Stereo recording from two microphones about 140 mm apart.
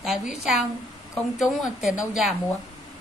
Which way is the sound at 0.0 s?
5° right (ahead or behind).